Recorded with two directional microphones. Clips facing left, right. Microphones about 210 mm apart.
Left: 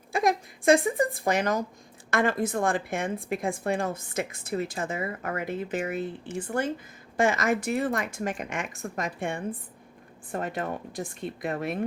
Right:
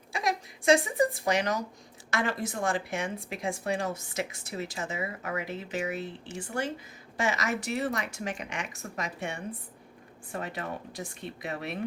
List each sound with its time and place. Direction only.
0.1 s a woman's voice: 50° left (ahead or behind)